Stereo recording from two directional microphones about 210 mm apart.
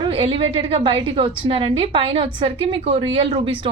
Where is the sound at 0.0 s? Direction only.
25° right (ahead or behind).